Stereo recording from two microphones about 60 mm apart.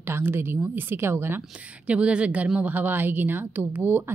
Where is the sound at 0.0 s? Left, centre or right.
Right.